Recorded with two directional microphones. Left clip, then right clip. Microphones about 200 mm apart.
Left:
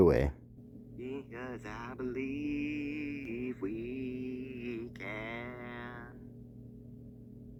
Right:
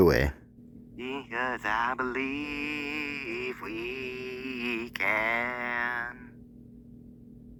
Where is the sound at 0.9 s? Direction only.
35° right (ahead or behind).